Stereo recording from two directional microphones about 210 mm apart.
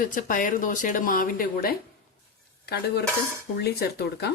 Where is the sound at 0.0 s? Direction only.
40° left (ahead or behind).